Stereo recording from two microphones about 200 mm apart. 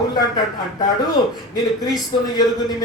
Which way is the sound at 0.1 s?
20° left (ahead or behind).